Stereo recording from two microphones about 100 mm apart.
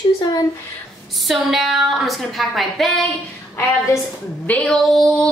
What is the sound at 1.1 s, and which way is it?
A woman's voice, centre (ahead or behind).